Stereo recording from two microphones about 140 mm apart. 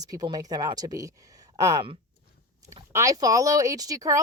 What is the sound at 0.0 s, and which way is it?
Speech, 25° right (ahead or behind).